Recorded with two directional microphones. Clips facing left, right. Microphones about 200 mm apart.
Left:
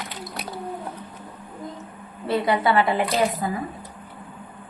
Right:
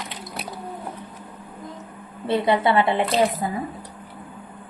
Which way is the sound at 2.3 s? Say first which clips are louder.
Right 1 dB; 25° right (ahead or behind).